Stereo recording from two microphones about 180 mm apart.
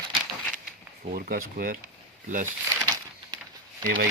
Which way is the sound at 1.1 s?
55° right (ahead or behind).